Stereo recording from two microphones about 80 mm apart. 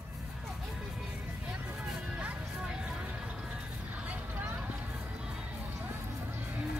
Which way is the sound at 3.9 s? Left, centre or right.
Centre.